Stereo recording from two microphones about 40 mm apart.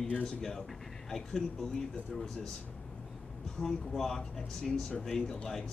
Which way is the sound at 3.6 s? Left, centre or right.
Centre.